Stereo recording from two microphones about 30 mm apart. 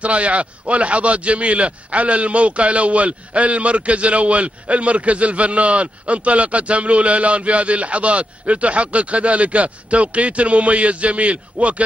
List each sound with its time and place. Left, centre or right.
0.0 s a man's voice: right